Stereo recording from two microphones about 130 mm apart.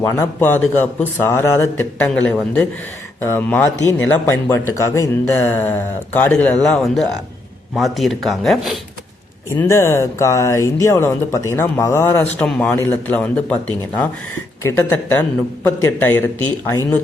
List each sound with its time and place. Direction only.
0.0 s speech: 20° left (ahead or behind); by 8.8 s centre (ahead or behind)
9.6 s speech: 20° left (ahead or behind)